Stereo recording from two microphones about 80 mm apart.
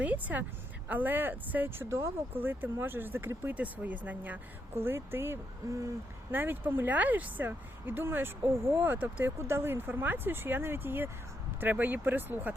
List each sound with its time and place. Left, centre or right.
0.0 s speech: centre; by 5.9 s right
6.3 s speech: right